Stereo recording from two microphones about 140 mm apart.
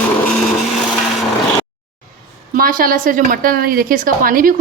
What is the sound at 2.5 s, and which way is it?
A woman's voice, 80° right.